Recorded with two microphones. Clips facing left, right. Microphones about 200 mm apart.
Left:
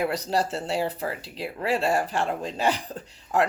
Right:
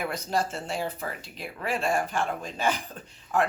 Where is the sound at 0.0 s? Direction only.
35° left (ahead or behind).